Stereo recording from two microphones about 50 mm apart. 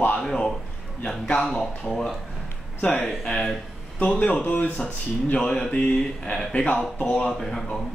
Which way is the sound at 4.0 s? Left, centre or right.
Left.